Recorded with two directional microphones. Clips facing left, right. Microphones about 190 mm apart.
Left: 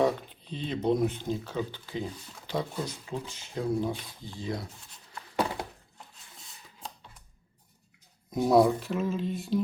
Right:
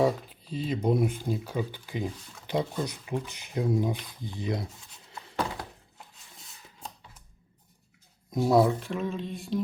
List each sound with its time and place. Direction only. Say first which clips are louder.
0.0 s speech: right 1 dB; centre (ahead or behind); by 4.6 s 20° right (ahead or behind)
6.7 s scissors: even; 5° right (ahead or behind)
8.3 s speech: left 1 dB; centre (ahead or behind)